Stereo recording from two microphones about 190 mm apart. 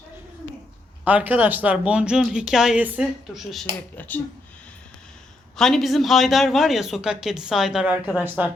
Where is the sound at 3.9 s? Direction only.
10° left (ahead or behind).